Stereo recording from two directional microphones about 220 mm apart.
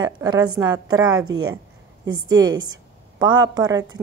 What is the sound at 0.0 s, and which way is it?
A woman's voice, 20° right (ahead or behind).